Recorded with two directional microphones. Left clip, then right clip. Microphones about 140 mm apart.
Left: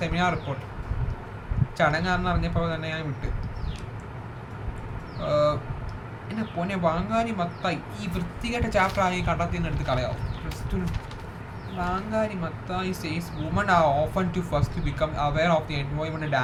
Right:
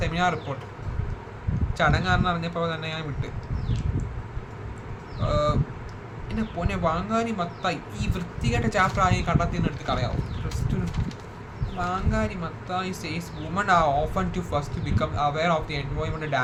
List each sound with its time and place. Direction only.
0.0 s a sound: 15° right (ahead or behind)
1.8 s speech: 15° right (ahead or behind)
5.2 s speech: 15° right (ahead or behind)
6.6 s speech: 15° right (ahead or behind)
11.8 s speech: 20° right (ahead or behind)